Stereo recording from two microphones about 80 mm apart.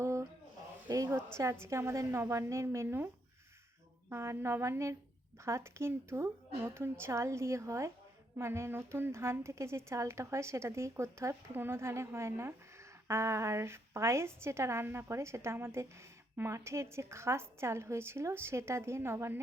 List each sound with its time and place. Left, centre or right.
0.0 s a sound: right
1.4 s a woman's voice: right
4.1 s a woman's voice: right